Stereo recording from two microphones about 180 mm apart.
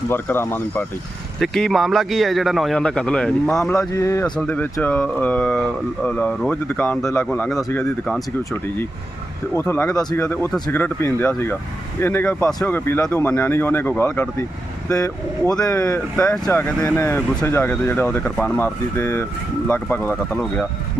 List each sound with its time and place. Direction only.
0.1 s a man's voice: 10° left (ahead or behind)
3.8 s speech: 15° left (ahead or behind)
15.5 s speech: 10° left (ahead or behind)